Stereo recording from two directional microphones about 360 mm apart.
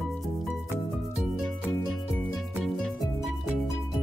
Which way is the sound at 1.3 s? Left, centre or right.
Centre.